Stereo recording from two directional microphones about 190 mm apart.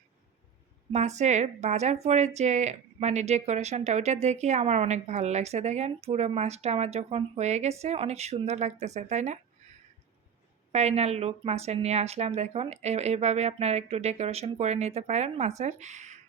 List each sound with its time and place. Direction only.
0.9 s speech: 35° right (ahead or behind)
10.7 s speech: 35° right (ahead or behind)